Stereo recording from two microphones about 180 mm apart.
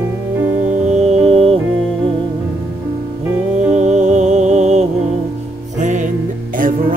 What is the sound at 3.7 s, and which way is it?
Music, 40° right (ahead or behind).